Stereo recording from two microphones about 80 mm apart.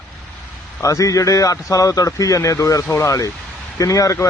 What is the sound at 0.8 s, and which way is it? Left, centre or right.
A man's voice, left.